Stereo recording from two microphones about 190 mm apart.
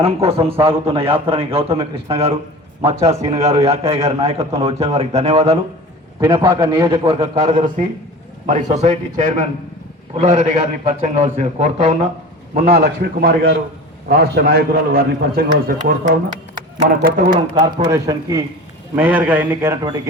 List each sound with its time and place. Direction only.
0.0 s a man's voice: 30° right (ahead or behind)
6.4 s a man's voice: 10° right (ahead or behind)
6.8 s a man's voice: 25° right (ahead or behind)
12.6 s a man's voice: 55° right (ahead or behind)
17.2 s a man's voice: 25° right (ahead or behind); by 19.7 s 10° right (ahead or behind)